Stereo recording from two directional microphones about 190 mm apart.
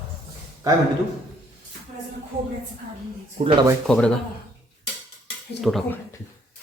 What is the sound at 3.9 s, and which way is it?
Speech, 5° left (ahead or behind).